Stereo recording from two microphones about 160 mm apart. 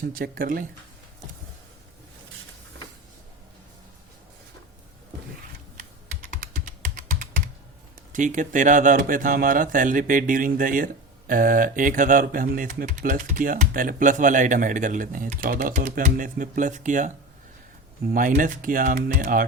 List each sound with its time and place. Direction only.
0.0 s speech: 60° right (ahead or behind)
6.4 s computer keyboard: 60° right (ahead or behind)
8.1 s speech: 50° right (ahead or behind)
18.0 s speech: 65° right (ahead or behind)